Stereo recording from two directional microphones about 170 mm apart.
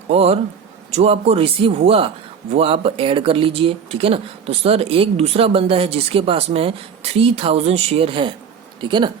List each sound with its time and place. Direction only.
0.1 s speech: 35° right (ahead or behind)